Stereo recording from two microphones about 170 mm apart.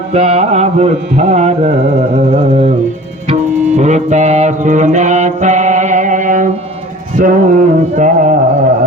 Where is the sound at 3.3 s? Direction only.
40° right (ahead or behind).